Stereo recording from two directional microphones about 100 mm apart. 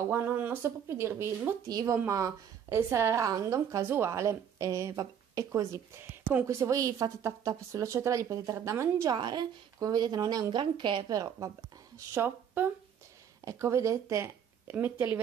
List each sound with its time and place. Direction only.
0.1 s a woman's voice: 20° right (ahead or behind)
9.1 s speech: 45° right (ahead or behind)
10.5 s speech: 50° right (ahead or behind)
11.1 s a woman's voice: 40° right (ahead or behind)
12.1 s speech: 25° right (ahead or behind)